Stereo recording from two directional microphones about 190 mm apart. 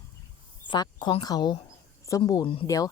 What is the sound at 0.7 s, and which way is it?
Speech, 25° left (ahead or behind).